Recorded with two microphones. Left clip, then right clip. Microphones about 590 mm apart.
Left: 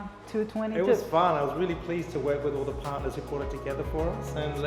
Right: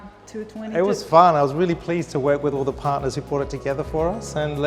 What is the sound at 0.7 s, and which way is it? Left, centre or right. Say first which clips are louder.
A man's voice: right 9 dB; right.